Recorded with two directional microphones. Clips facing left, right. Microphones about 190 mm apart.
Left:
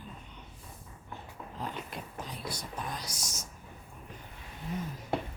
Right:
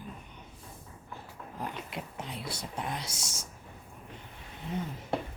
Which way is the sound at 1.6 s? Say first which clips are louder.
Right 1 dB; 25° right (ahead or behind).